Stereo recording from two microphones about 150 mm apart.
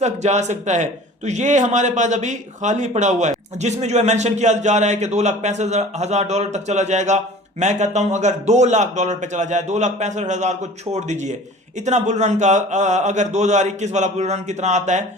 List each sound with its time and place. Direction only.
0.0 s a man's voice: 50° right (ahead or behind)